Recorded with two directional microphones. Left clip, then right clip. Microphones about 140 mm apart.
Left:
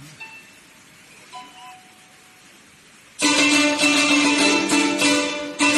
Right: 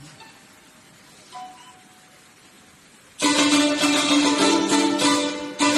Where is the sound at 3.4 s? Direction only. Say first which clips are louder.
Left 2 dB; centre (ahead or behind).